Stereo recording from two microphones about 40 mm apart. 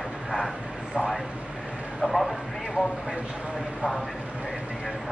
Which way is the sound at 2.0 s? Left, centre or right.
Centre.